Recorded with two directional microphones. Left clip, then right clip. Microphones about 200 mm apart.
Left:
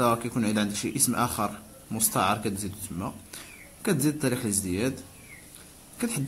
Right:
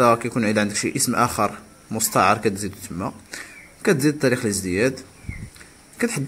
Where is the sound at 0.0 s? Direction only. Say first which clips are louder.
Right 8 dB; 5° right (ahead or behind).